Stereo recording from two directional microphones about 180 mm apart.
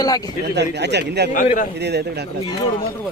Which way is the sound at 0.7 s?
70° right (ahead or behind).